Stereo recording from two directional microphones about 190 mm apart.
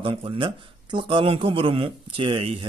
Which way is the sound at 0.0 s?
30° right (ahead or behind).